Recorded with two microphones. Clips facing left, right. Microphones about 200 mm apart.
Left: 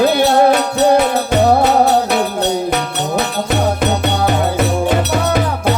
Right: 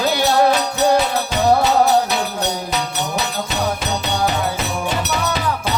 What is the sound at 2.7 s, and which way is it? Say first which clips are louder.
Music: left 5 dB; 55° left (ahead or behind).